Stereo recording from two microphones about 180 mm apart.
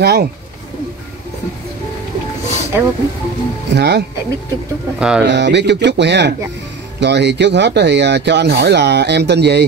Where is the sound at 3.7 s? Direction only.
65° right (ahead or behind).